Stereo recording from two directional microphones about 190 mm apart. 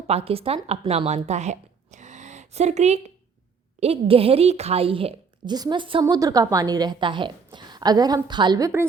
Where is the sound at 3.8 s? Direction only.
30° right (ahead or behind).